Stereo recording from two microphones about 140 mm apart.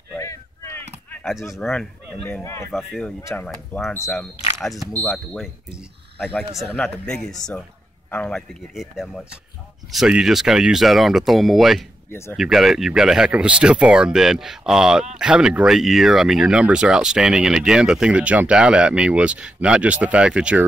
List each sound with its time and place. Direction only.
0.2 s a sound: 20° left (ahead or behind)
1.6 s speech: 5° left (ahead or behind)
2.2 s speech: 20° left (ahead or behind)
2.7 s speech: 5° left (ahead or behind)
3.2 s speech: 20° left (ahead or behind)
4.6 s speech: centre (ahead or behind)
7.1 s speech: 5° left (ahead or behind)
12.1 s speech: 15° left (ahead or behind)
12.4 s speech: centre (ahead or behind)